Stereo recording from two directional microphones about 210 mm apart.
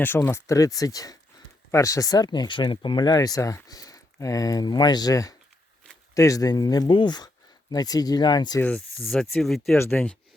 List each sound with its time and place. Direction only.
0.0 s speech: 10° left (ahead or behind)
8.6 s speech: 5° left (ahead or behind)